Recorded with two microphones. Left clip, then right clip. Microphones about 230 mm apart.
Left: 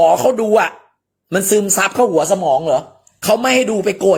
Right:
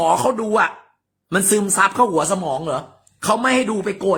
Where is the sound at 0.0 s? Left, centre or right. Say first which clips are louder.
Left 5 dB; centre.